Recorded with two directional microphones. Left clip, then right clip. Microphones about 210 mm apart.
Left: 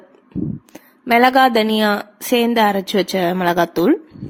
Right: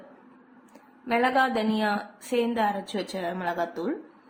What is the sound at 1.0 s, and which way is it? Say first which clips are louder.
A woman's voice: left 11 dB; 50° left (ahead or behind).